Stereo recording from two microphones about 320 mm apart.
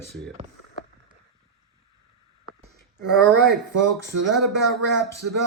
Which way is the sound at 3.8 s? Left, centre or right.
Right.